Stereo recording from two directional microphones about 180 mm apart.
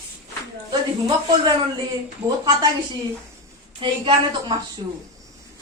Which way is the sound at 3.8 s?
25° right (ahead or behind).